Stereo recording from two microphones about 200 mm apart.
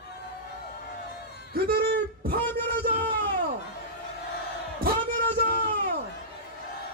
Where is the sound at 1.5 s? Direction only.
50° right (ahead or behind).